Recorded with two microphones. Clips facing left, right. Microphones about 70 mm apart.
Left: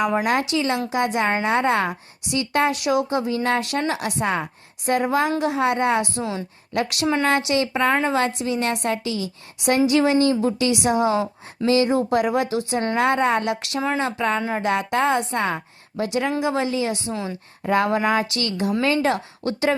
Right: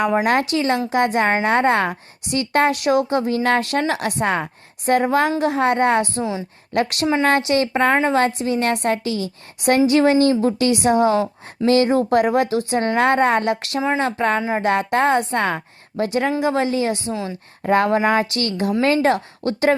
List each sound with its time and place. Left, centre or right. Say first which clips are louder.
0.5 s a woman's voice: right 3 dB; right
17.1 s a woman's voice: right 2 dB; centre
17.6 s a woman's voice: right 3 dB; right